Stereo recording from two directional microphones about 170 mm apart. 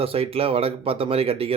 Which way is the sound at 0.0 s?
35° right (ahead or behind).